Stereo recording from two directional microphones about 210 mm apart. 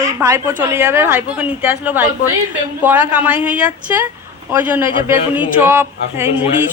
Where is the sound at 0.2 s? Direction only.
15° right (ahead or behind).